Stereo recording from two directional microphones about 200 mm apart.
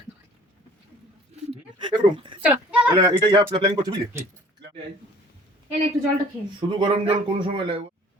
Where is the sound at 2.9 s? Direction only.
20° right (ahead or behind).